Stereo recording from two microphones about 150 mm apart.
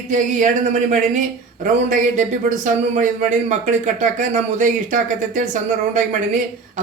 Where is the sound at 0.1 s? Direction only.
60° right (ahead or behind).